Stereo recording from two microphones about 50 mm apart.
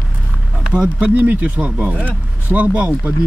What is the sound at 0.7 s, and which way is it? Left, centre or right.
Speech, right.